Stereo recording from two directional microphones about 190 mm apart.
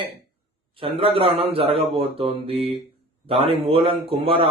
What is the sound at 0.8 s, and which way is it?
A man's voice, 30° right (ahead or behind).